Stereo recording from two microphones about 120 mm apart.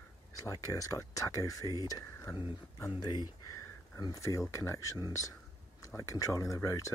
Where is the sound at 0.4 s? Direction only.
30° left (ahead or behind).